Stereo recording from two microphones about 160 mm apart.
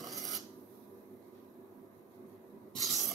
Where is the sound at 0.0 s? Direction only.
Centre (ahead or behind).